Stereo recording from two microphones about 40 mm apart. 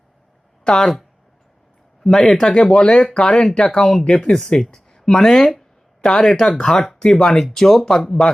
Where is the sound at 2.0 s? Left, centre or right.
Centre.